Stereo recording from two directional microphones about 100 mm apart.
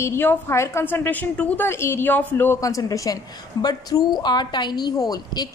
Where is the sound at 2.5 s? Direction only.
35° left (ahead or behind).